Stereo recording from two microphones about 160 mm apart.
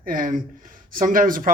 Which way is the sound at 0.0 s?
55° right (ahead or behind).